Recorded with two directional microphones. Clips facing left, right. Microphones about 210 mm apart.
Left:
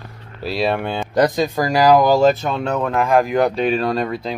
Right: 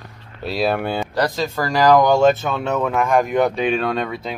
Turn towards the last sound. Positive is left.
turn(degrees=0)  # may be behind; listen again after turning